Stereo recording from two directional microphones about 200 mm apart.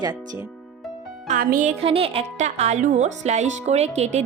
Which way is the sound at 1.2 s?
45° right (ahead or behind).